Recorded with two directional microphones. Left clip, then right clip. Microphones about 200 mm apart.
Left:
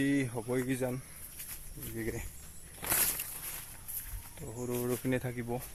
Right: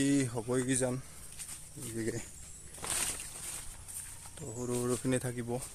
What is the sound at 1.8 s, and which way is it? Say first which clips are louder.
Cricket: right 1 dB; 15° right (ahead or behind).